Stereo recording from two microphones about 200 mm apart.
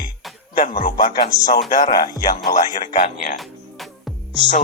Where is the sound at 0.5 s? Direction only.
45° left (ahead or behind).